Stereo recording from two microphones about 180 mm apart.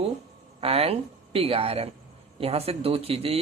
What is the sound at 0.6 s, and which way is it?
Speech, 30° right (ahead or behind).